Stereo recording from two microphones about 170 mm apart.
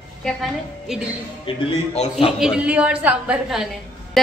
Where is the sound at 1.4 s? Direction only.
35° left (ahead or behind).